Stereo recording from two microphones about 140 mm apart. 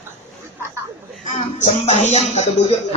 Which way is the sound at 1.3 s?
55° left (ahead or behind).